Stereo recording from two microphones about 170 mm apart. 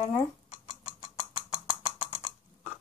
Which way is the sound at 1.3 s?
30° left (ahead or behind).